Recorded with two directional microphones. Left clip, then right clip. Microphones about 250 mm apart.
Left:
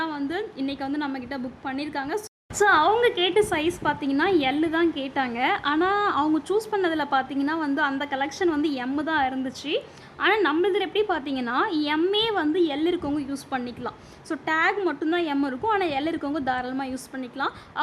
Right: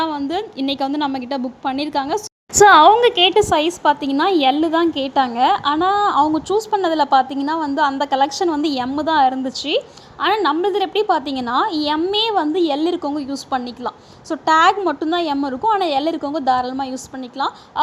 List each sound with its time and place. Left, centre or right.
0.0 s a woman's voice: centre